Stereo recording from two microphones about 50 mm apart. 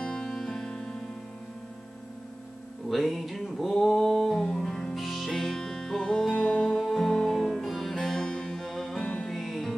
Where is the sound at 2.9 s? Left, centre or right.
Centre.